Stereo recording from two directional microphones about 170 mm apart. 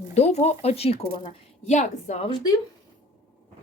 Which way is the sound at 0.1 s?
40° left (ahead or behind).